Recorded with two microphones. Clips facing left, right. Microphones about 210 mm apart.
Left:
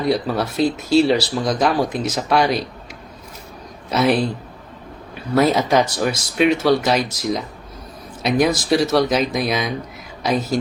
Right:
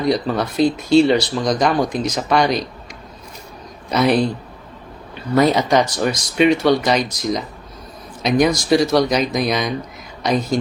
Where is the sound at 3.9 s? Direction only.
5° left (ahead or behind).